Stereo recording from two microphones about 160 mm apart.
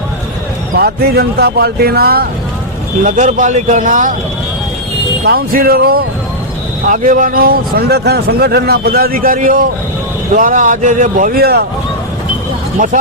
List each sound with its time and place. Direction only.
0.8 s a man's voice: 85° right
3.0 s speech: 50° right (ahead or behind)
5.2 s a man's voice: 70° right (ahead or behind)
6.8 s a man's voice: 55° right (ahead or behind); by 11.6 s 75° right (ahead or behind)